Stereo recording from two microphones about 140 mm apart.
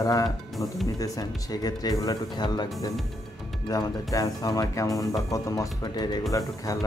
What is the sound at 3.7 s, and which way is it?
Speech, 25° left (ahead or behind).